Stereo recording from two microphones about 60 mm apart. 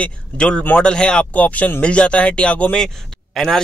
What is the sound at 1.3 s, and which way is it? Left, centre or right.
Speech, left.